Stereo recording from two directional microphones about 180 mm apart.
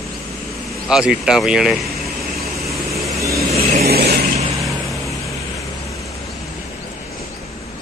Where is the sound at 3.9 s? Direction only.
60° right (ahead or behind).